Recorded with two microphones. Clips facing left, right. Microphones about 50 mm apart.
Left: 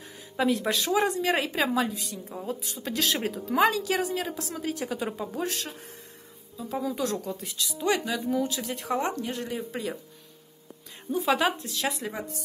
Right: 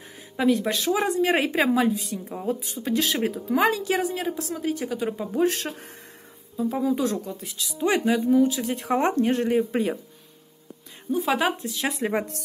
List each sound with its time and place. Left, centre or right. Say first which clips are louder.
0.4 s speech: right 3 dB; centre
1.2 s a woman's voice: right 4 dB; right; by 5.4 s centre
5.5 s speech: right 5 dB; right
6.7 s a woman's voice: right 4 dB; centre
7.7 s a woman's voice: right 5 dB; centre
8.9 s speech: right 8 dB; right
11.1 s a woman's voice: right 2 dB; centre
12.1 s speech: right 9 dB; right